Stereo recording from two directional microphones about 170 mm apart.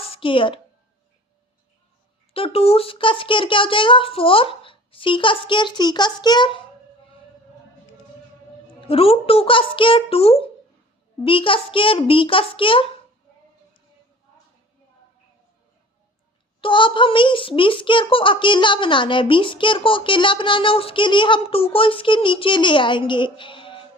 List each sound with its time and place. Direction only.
0.1 s a woman's voice: 30° left (ahead or behind)
2.3 s speech: 35° left (ahead or behind)
8.9 s speech: 35° left (ahead or behind)
16.6 s a child's voice: 30° left (ahead or behind)